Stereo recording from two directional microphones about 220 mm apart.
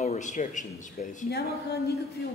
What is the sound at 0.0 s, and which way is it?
A man's voice, 30° left (ahead or behind).